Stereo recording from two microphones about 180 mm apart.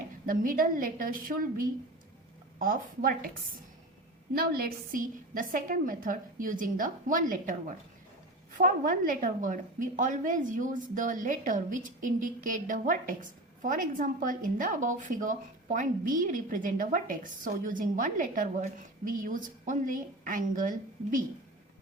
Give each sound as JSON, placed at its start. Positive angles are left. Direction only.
{"t": 0.3, "sound": "a woman's voice", "side_deg": -50}
{"t": 4.4, "sound": "a woman's voice", "side_deg": -55}
{"t": 8.5, "sound": "a woman's voice", "side_deg": -50}